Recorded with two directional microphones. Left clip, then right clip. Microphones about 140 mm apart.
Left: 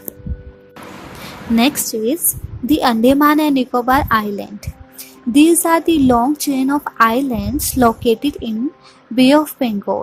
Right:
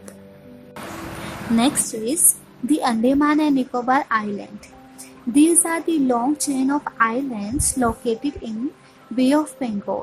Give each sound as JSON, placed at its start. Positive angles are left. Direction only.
{"t": 1.5, "sound": "a woman's voice", "side_deg": 40}